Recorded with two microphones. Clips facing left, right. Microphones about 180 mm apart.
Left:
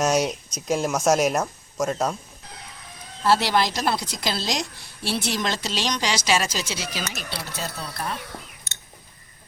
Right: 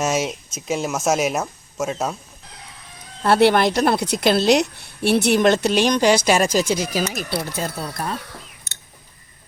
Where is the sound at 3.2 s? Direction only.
60° right (ahead or behind).